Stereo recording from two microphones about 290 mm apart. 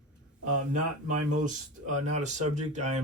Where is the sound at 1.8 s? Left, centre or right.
Right.